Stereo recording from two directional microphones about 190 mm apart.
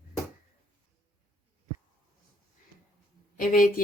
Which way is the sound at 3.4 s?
45° left (ahead or behind).